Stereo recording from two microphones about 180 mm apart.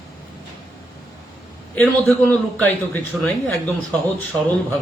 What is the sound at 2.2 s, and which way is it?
A man's voice, 10° left (ahead or behind).